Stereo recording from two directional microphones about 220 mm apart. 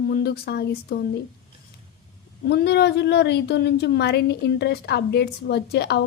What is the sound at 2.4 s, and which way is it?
A woman's voice, 50° left (ahead or behind).